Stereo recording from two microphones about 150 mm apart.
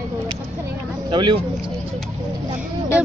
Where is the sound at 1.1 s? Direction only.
30° right (ahead or behind).